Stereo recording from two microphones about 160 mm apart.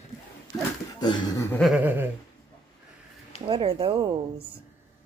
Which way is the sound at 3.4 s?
35° right (ahead or behind).